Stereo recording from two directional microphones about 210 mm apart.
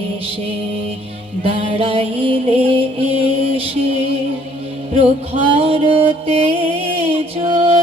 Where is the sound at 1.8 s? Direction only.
25° right (ahead or behind).